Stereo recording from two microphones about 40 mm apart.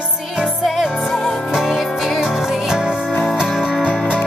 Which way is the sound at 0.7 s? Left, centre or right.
Centre.